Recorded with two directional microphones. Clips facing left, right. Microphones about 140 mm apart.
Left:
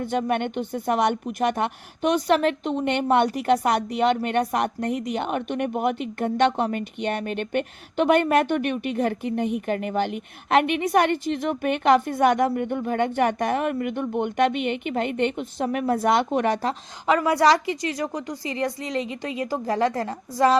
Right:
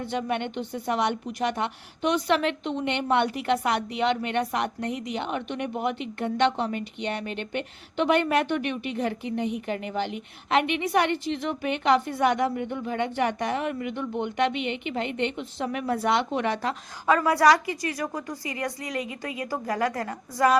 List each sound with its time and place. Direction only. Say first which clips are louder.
0.0 s a woman's voice: left 4 dB; 50° left (ahead or behind)
17.1 s a woman's voice: left 1 dB; 20° left (ahead or behind)